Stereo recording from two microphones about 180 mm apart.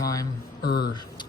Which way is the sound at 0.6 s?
60° left (ahead or behind).